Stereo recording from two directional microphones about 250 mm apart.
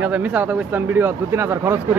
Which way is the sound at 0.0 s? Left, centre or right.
Centre.